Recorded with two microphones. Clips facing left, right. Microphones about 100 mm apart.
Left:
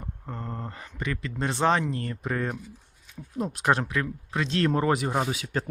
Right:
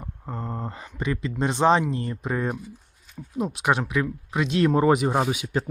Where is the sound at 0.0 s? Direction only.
15° right (ahead or behind).